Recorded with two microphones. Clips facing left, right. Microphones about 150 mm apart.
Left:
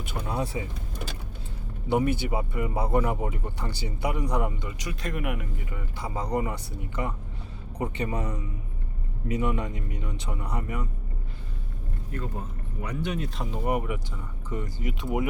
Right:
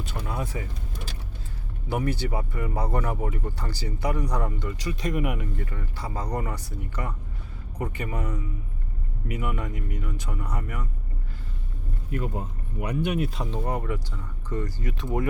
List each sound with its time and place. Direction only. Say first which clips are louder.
0.3 s speech: left 3 dB; 25° left (ahead or behind)
1.9 s speech: left 3 dB; 20° left (ahead or behind); by 5.5 s centre (ahead or behind)
5.5 s speech: right 2 dB; 15° left (ahead or behind)
9.4 s speech: left 2 dB; 20° left (ahead or behind)
12.1 s speech: right 4 dB; 15° right (ahead or behind)
13.3 s speech: right 2 dB; 5° left (ahead or behind)
13.7 s speech: left 2 dB; 15° left (ahead or behind)